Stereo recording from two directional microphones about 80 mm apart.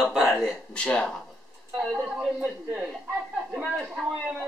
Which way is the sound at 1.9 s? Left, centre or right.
Centre.